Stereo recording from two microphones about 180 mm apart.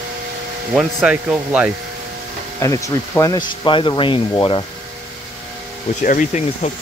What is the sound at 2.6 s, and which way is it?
Speech, 15° left (ahead or behind).